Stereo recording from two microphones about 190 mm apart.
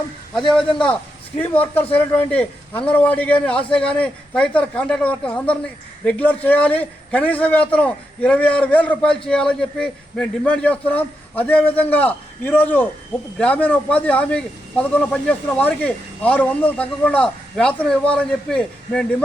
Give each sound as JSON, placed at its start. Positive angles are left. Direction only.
{"t": 0.3, "sound": "a man's voice", "side_deg": 0}
{"t": 1.9, "sound": "a man's voice", "side_deg": 10}